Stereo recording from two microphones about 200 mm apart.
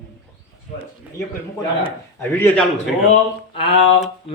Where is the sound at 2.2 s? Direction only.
10° left (ahead or behind).